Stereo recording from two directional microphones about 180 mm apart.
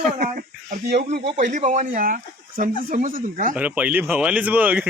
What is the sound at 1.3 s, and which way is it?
Speech, 45° right (ahead or behind).